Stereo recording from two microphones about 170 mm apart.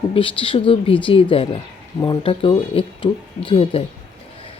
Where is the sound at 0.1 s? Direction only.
30° left (ahead or behind).